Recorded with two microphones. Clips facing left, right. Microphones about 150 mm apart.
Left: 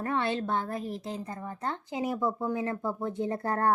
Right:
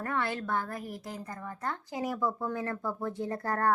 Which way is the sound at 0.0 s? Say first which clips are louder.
Left 3 dB; 25° left (ahead or behind).